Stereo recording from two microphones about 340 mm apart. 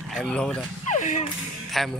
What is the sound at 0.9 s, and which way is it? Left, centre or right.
Speech, left.